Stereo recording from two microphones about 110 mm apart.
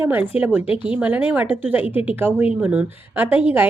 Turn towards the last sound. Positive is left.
turn(degrees=-15)  # may be behind; listen again after turning